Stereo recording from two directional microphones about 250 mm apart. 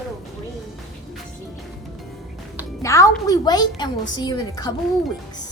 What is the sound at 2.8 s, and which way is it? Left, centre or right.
Speech, centre.